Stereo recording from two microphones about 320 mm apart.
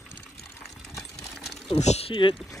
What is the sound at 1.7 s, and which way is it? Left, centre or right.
Speech, centre.